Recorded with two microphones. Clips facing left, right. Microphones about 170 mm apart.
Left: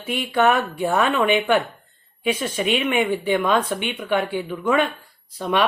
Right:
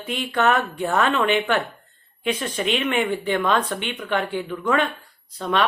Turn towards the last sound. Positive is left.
turn(degrees=10)  # may be behind; listen again after turning